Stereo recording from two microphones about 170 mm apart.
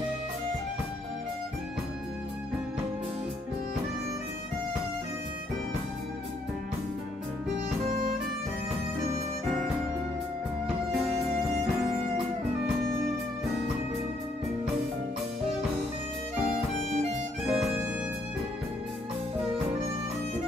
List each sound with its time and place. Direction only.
17.5 s music: 5° right (ahead or behind)